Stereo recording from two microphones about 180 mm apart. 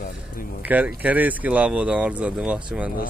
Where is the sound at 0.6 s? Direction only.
10° right (ahead or behind).